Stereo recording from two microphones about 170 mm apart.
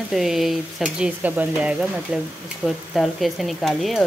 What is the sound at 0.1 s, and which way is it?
Speech, centre (ahead or behind).